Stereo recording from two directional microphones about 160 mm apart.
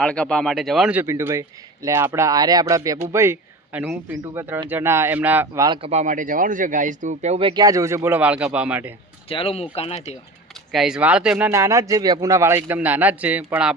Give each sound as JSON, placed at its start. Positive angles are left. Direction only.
{"t": 0.0, "sound": "a man's voice", "side_deg": 5}
{"t": 5.6, "sound": "speech", "side_deg": -30}
{"t": 5.9, "sound": "speech", "side_deg": -50}
{"t": 9.3, "sound": "speech", "side_deg": 35}
{"t": 10.7, "sound": "a man's voice", "side_deg": 0}